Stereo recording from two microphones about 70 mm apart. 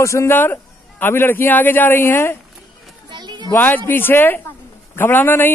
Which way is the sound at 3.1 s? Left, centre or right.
Right.